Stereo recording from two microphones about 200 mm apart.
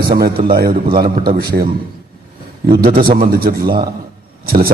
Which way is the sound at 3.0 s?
50° right (ahead or behind).